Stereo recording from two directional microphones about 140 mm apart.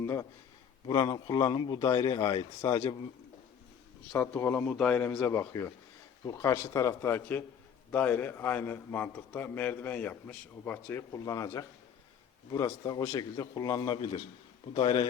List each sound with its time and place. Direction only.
0.0 s speech: 20° left (ahead or behind)
0.9 s a man's voice: 30° left (ahead or behind)
4.2 s a man's voice: 15° left (ahead or behind)
5.2 s a man's voice: 20° left (ahead or behind); by 15.0 s 35° left (ahead or behind)